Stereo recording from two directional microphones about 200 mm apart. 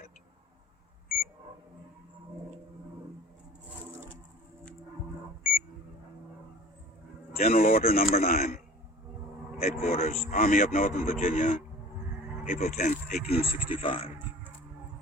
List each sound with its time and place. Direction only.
7.3 s a man's voice: 45° left (ahead or behind)
13.1 s a man's voice: 50° left (ahead or behind)
13.7 s speech: 25° left (ahead or behind)